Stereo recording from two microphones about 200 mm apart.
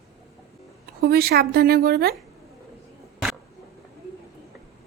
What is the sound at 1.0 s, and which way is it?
A woman's voice, 50° right (ahead or behind).